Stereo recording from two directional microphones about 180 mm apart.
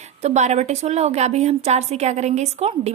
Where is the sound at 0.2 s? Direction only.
40° right (ahead or behind).